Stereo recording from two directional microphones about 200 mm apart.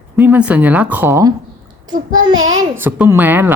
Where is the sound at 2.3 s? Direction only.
80° right.